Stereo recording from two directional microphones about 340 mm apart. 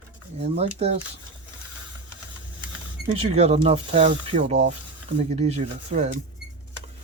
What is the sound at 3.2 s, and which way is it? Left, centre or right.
Speech, centre.